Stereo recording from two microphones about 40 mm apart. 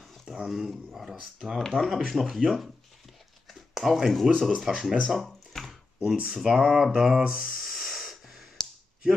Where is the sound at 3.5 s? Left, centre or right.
Centre.